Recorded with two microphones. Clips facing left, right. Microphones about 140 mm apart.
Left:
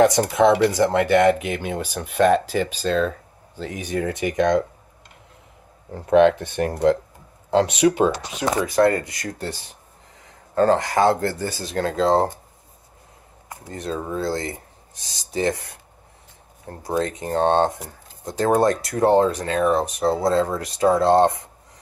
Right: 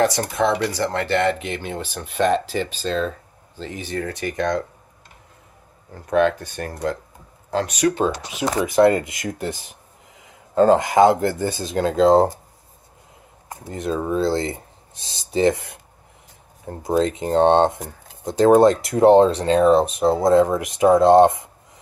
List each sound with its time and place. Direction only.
0.0 s speech: 20° left (ahead or behind)
6.1 s speech: 20° left (ahead or behind)
8.4 s speech: 20° right (ahead or behind)
13.7 s speech: 20° right (ahead or behind)